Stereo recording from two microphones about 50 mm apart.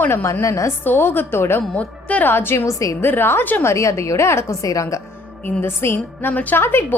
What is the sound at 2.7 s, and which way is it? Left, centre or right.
Speech, left.